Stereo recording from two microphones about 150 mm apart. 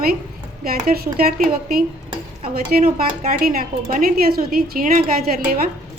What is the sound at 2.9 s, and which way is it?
Speech, 65° right (ahead or behind).